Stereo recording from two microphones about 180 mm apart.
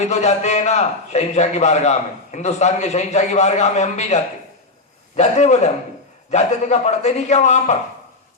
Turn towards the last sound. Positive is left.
turn(degrees=40)  # may be behind; listen again after turning